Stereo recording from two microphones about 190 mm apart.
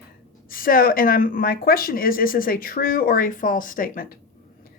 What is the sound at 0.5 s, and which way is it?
Speech, 50° left (ahead or behind).